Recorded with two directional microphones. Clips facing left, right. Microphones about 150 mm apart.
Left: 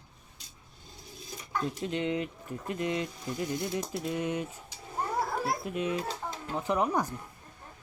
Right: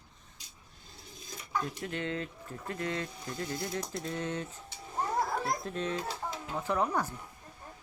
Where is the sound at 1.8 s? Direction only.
20° left (ahead or behind).